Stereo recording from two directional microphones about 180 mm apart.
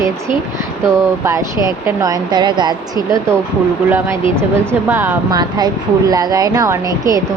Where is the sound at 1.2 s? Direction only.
15° right (ahead or behind).